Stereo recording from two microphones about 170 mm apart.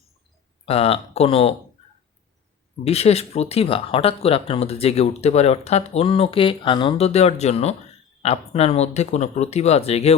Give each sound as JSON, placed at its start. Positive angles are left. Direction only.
{"t": 0.6, "sound": "speech", "side_deg": 35}
{"t": 2.8, "sound": "speech", "side_deg": 35}